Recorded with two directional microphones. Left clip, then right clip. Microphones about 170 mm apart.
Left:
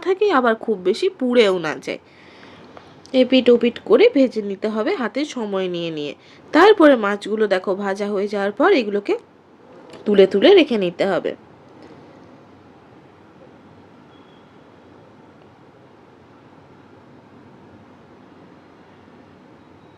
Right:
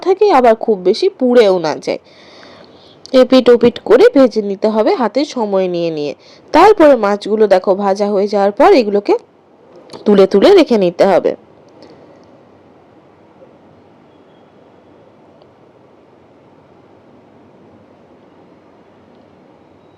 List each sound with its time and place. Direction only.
0.0 s speech: 20° right (ahead or behind)
2.3 s boat: 35° right (ahead or behind)
3.0 s speech: 40° right (ahead or behind); by 9.0 s 20° right (ahead or behind)
9.9 s speech: 35° right (ahead or behind)